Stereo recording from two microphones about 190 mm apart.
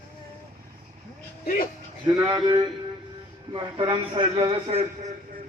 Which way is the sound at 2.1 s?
20° right (ahead or behind).